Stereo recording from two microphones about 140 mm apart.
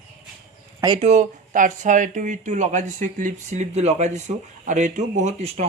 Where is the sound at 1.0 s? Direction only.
55° right (ahead or behind).